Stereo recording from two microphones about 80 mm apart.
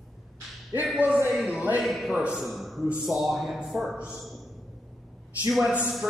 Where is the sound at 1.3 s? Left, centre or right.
Centre.